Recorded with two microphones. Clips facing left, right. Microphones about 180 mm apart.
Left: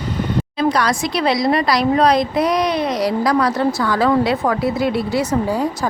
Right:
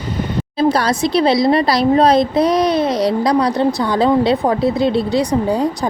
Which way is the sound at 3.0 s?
20° right (ahead or behind).